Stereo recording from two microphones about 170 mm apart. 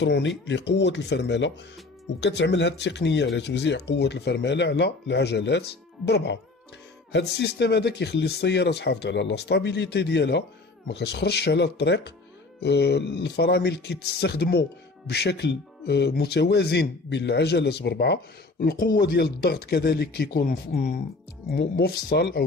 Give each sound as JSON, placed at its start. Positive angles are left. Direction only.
{"t": 0.0, "sound": "speech", "side_deg": 90}